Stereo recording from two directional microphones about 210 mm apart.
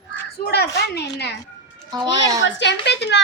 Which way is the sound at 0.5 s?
50° left (ahead or behind).